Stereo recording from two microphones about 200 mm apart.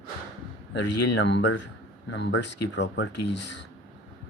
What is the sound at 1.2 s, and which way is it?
Speech, 60° left (ahead or behind).